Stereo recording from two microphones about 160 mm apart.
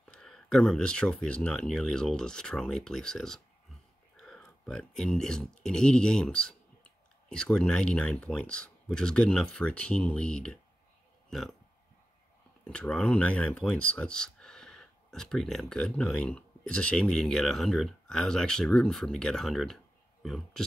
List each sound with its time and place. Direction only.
0.0 s speech: 5° left (ahead or behind)
12.6 s speech: 5° left (ahead or behind)